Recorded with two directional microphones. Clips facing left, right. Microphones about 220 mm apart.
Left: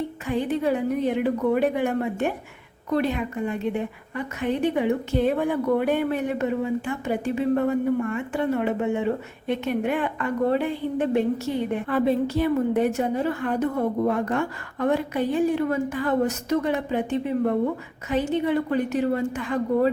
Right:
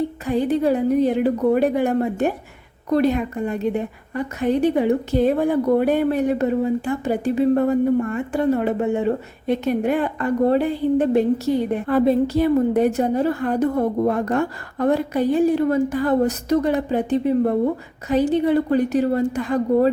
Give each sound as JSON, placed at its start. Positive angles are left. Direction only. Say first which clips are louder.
{"t": 0.3, "sound": "a woman's voice", "louder": "right 4 dB", "side_deg": -35}